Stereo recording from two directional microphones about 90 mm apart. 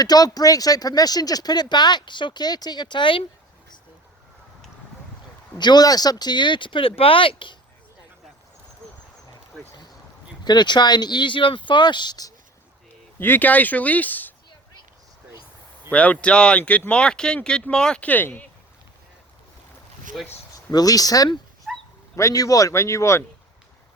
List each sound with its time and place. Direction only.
0.0 s speech: 45° left (ahead or behind); by 3.2 s 70° left (ahead or behind)
5.5 s speech: 55° left (ahead or behind); by 7.5 s 75° left (ahead or behind)
10.4 s speech: 55° left (ahead or behind)
13.1 s speech: 25° left (ahead or behind)
15.9 s speech: 15° left (ahead or behind)
20.1 s speech: centre (ahead or behind)
20.7 s speech: 45° left (ahead or behind)
21.7 s dog: centre (ahead or behind)
22.1 s speech: 35° left (ahead or behind)